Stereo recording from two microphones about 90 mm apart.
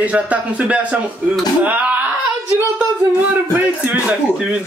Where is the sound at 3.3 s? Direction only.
20° right (ahead or behind).